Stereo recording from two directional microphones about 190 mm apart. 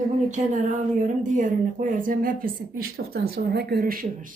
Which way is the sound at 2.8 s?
60° right (ahead or behind).